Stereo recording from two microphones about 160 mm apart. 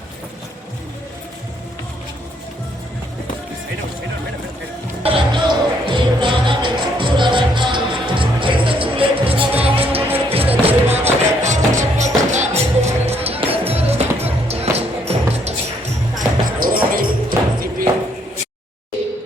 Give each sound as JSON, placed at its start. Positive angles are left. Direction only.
{"t": 5.0, "sound": "music", "side_deg": -30}
{"t": 16.1, "sound": "music", "side_deg": -60}